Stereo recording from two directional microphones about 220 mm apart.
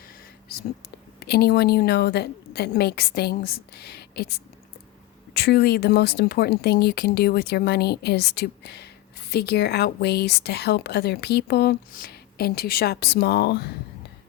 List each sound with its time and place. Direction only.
1.2 s a woman's voice: 45° left (ahead or behind)